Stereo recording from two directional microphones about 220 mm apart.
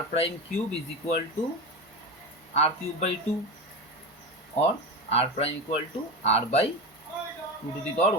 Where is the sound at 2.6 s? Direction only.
30° left (ahead or behind).